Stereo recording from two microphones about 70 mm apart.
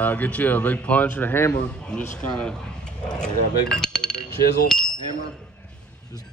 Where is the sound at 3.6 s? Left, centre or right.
Centre.